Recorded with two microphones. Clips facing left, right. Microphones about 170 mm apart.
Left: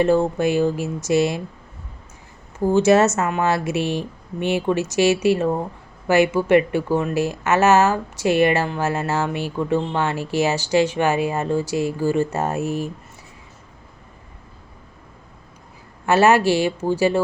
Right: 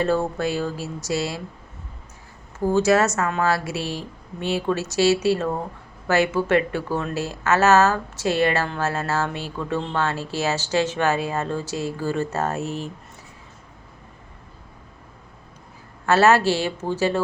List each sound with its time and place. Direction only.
0.0 s speech: 15° left (ahead or behind)
2.7 s speech: 25° left (ahead or behind)
16.0 s speech: 15° left (ahead or behind)